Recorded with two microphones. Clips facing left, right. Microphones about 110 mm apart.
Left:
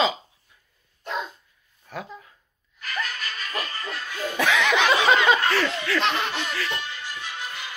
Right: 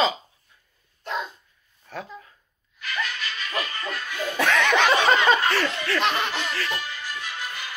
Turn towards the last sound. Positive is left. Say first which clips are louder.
# right 1 dB
turn(degrees=25)  # may be behind; listen again after turning